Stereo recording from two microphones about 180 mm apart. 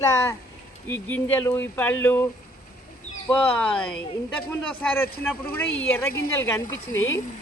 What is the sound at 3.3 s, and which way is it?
Speech, 10° left (ahead or behind).